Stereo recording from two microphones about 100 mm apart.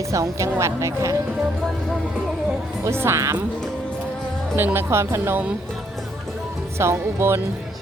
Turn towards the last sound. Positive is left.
turn(degrees=-25)  # may be behind; listen again after turning